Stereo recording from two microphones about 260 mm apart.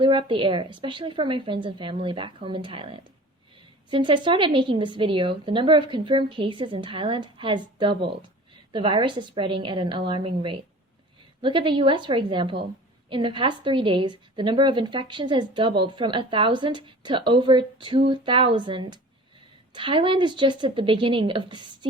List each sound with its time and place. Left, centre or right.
0.0 s a woman's voice: centre